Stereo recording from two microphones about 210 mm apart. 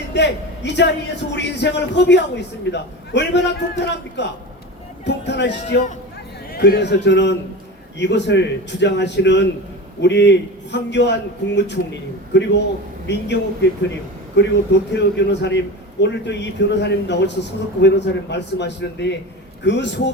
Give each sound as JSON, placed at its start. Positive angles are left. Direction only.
{"t": 0.1, "sound": "a man's voice", "side_deg": 55}